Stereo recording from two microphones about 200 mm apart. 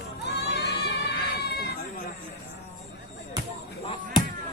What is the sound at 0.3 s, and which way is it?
Crowd, 55° left (ahead or behind).